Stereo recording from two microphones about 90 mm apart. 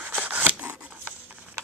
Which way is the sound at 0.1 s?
15° right (ahead or behind).